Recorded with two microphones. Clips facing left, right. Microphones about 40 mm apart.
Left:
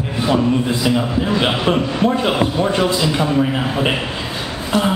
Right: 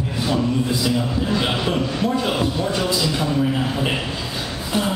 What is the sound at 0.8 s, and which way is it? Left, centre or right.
A man's voice, left.